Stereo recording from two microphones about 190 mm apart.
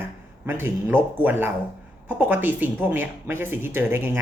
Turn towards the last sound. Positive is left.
turn(degrees=-10)  # may be behind; listen again after turning